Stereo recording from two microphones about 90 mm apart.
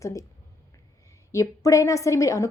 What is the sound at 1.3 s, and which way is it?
A woman's voice, 35° left (ahead or behind).